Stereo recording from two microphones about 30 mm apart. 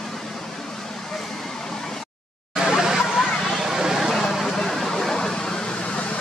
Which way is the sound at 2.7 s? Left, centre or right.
Centre.